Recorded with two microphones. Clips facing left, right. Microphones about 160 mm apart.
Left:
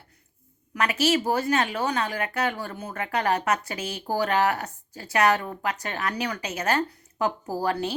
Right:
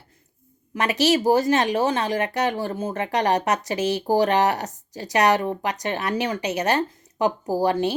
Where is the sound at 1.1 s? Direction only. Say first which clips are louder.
Right 5 dB; 40° right (ahead or behind); by 3.2 s 25° right (ahead or behind).